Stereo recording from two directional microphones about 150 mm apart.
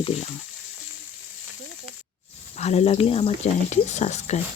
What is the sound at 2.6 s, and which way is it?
Speech, 45° left (ahead or behind).